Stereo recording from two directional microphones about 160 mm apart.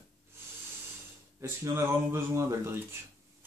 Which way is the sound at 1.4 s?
15° right (ahead or behind).